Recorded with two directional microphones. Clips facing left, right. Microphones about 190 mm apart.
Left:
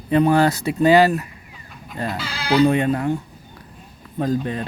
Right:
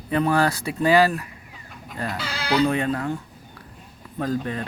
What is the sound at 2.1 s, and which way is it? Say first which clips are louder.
Bleat: left 1 dB; 60° right (ahead or behind).